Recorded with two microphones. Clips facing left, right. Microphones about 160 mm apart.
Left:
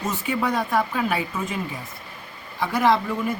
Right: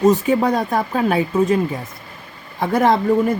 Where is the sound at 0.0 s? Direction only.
40° right (ahead or behind).